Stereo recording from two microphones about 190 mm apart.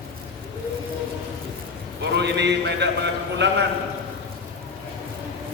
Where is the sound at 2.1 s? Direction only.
65° right (ahead or behind).